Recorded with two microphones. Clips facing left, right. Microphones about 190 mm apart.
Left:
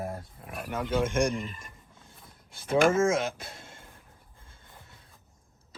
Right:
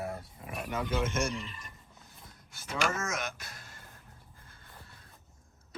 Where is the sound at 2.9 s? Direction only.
30° left (ahead or behind).